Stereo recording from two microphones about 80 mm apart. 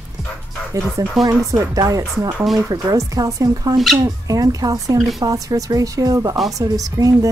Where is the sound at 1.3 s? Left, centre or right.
Right.